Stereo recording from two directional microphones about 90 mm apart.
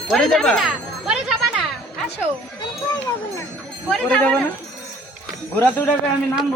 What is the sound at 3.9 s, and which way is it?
Speech, 10° left (ahead or behind).